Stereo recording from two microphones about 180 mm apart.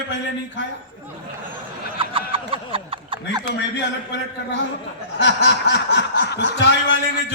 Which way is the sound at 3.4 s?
75° left (ahead or behind).